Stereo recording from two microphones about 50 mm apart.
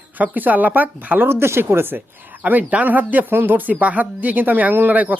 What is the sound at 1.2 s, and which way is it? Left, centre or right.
Speech, right.